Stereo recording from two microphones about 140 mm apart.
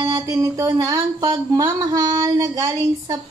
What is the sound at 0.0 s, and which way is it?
Speech, 25° right (ahead or behind).